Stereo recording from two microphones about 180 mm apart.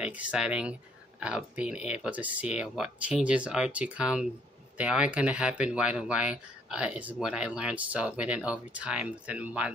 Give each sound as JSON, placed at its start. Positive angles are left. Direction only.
{"t": 0.0, "sound": "speech", "side_deg": -5}